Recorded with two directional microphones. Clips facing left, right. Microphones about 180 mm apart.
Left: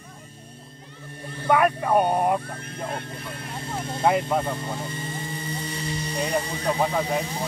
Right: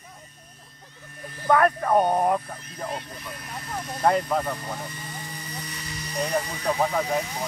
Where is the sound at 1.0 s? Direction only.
30° left (ahead or behind).